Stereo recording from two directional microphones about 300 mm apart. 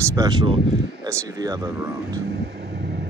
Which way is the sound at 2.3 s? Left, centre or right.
Right.